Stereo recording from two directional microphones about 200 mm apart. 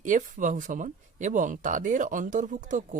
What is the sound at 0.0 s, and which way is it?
Speech, 40° right (ahead or behind).